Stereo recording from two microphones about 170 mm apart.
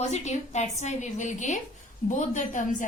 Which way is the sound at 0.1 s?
40° left (ahead or behind).